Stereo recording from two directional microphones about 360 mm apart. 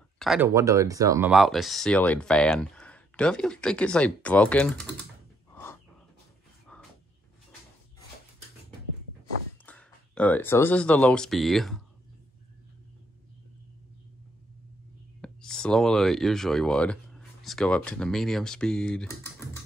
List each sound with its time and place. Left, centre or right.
0.2 s speech: centre
5.5 s a sound: centre
9.7 s speech: centre
15.2 s speech: centre